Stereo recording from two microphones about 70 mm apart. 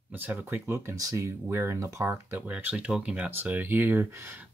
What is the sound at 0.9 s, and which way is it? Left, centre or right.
Speech, right.